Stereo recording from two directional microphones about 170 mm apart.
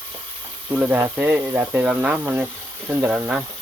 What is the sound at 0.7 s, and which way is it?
Speech, 10° right (ahead or behind).